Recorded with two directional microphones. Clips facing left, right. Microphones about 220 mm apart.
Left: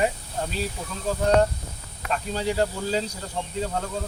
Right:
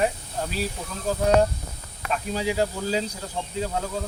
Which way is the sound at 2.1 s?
5° right (ahead or behind).